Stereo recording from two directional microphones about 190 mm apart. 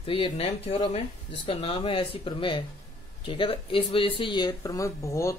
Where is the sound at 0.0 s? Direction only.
30° left (ahead or behind).